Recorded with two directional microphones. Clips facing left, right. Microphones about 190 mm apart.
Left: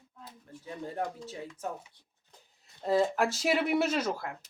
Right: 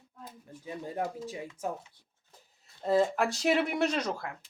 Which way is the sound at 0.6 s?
15° right (ahead or behind).